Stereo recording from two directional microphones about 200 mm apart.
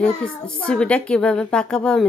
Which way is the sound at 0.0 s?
5° left (ahead or behind).